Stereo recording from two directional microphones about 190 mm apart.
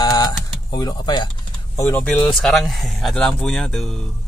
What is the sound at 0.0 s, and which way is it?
Typing, 20° left (ahead or behind).